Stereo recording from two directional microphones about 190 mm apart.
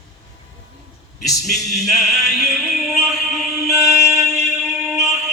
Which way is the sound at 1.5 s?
Centre (ahead or behind).